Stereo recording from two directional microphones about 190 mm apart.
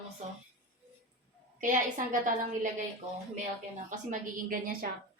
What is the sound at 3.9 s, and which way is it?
Speech, 45° right (ahead or behind).